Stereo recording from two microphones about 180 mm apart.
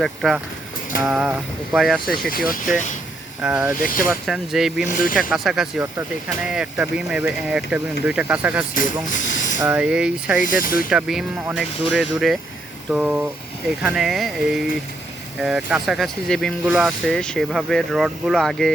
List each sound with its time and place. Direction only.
0.0 s speech: centre (ahead or behind)
2.3 s speech: 50° left (ahead or behind)
3.4 s speech: 10° right (ahead or behind)
4.9 s speech: 50° left (ahead or behind)
5.3 s speech: centre (ahead or behind)
8.7 s speech: 45° left (ahead or behind)
9.6 s speech: 10° right (ahead or behind)
10.4 s speech: 50° left (ahead or behind)
10.8 s speech: 5° right (ahead or behind)